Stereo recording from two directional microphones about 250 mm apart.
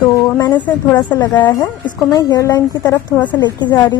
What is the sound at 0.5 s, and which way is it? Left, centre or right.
Speech, centre.